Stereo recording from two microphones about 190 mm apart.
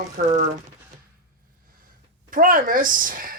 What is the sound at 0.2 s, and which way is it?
Speech, 45° right (ahead or behind).